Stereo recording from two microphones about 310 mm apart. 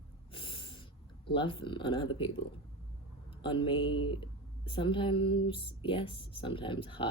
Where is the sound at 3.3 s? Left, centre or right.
Centre.